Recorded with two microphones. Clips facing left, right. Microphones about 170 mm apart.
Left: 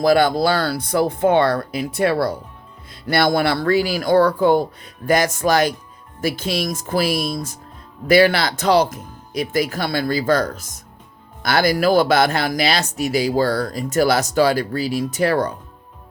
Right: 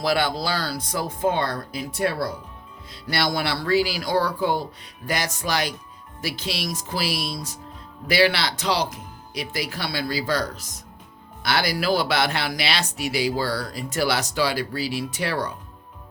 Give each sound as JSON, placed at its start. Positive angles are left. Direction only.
{"t": 0.0, "sound": "speech", "side_deg": 45}
{"t": 2.9, "sound": "speech", "side_deg": 55}